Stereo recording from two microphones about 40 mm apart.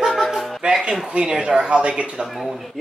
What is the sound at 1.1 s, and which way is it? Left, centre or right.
Speech, right.